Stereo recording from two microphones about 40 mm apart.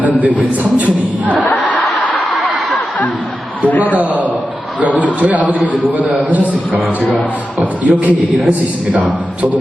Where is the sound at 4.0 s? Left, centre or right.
Right.